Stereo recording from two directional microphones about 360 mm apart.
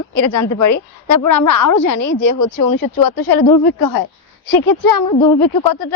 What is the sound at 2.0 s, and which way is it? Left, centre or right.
Speech, left.